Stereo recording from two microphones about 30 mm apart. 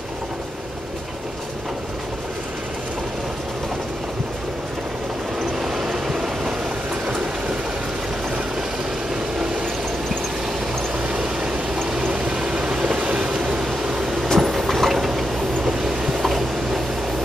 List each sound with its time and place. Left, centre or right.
5.6 s train: centre
11.0 s vehicle: right
12.0 s vehicle: right
12.9 s vehicle: right
13.9 s vehicle: centre
14.2 s vehicle: centre
15.6 s train: centre
16.1 s vehicle: centre